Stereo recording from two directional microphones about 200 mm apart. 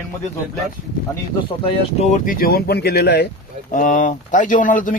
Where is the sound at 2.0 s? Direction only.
35° left (ahead or behind); by 3.2 s 55° left (ahead or behind).